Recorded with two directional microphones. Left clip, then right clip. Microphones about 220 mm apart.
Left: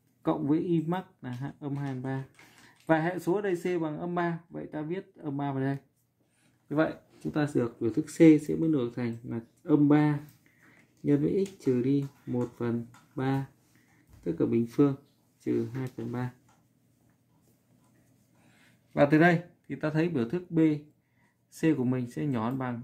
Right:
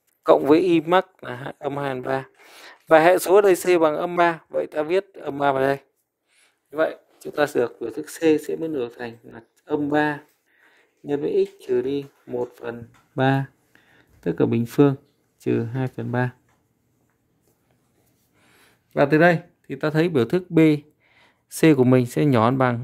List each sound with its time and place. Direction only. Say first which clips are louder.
0.2 s speech: right 13 dB; 50° right (ahead or behind)
7.3 s speech: right 9 dB; 45° right (ahead or behind)
13.1 s speech: right 11 dB; 45° right (ahead or behind)
18.9 s speech: right 6 dB; 25° right (ahead or behind); by 22.8 s 45° right (ahead or behind)